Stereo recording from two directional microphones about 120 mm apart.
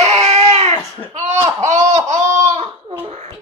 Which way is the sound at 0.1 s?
65° right (ahead or behind).